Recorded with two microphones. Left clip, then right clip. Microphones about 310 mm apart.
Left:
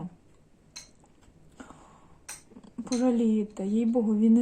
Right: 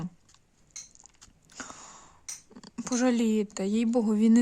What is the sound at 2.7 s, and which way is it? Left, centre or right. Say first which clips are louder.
Speech: even; right.